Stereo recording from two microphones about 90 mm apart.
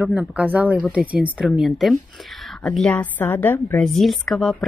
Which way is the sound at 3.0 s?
20° left (ahead or behind).